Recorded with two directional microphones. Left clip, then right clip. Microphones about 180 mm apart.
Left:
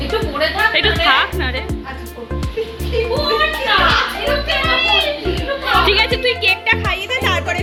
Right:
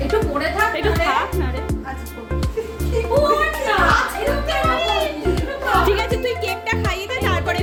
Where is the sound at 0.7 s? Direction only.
Centre (ahead or behind).